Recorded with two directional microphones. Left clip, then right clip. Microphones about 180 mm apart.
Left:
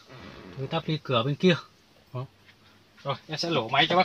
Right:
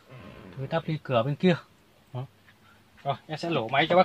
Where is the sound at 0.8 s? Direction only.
5° right (ahead or behind).